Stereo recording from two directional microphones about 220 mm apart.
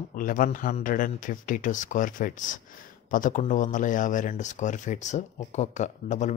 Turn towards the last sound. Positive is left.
turn(degrees=35)  # may be behind; listen again after turning